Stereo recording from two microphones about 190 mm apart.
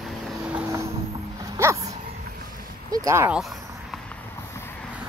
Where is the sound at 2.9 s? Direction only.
15° right (ahead or behind).